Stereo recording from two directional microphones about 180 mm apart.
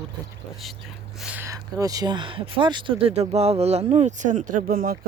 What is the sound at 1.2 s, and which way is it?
Speech, 5° right (ahead or behind).